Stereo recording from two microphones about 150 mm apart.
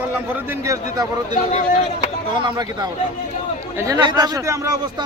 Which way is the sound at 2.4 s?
25° right (ahead or behind).